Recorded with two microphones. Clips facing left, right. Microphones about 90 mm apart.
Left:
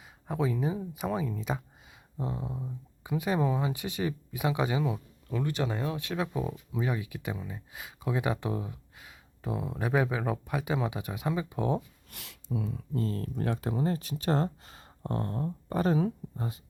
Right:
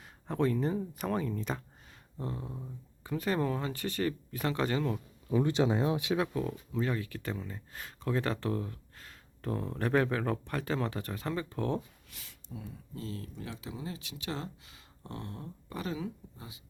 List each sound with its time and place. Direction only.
0.0 s speech: 5° left (ahead or behind)
5.3 s speech: 20° right (ahead or behind)
6.1 s speech: centre (ahead or behind)
6.3 s speech: 15° left (ahead or behind)
12.1 s speech: 80° left
13.0 s speech: 45° left (ahead or behind)